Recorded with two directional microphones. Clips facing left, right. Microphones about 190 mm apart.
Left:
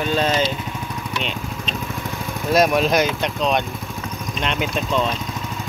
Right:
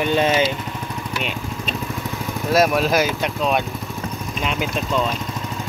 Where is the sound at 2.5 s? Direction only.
5° right (ahead or behind).